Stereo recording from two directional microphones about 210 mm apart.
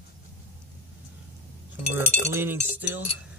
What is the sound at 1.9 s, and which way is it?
Speech, 10° right (ahead or behind).